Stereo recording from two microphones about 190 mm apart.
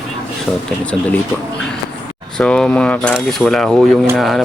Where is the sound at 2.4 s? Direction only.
5° left (ahead or behind).